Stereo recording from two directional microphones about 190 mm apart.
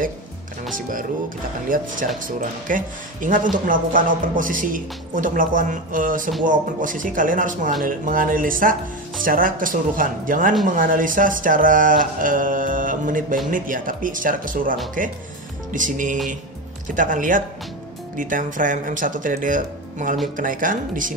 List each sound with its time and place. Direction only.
1.7 s speech: 45° right (ahead or behind)